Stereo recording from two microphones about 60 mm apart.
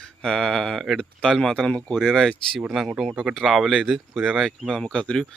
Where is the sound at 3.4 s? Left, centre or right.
Centre.